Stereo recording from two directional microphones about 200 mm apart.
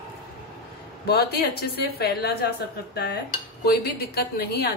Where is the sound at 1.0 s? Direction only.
50° left (ahead or behind).